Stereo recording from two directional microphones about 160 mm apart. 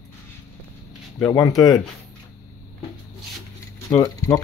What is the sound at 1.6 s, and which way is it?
Speech, 25° left (ahead or behind).